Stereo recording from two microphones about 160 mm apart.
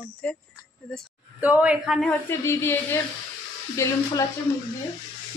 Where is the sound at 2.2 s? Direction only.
15° left (ahead or behind).